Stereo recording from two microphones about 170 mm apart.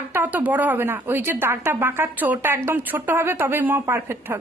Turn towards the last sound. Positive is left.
turn(degrees=-15)  # may be behind; listen again after turning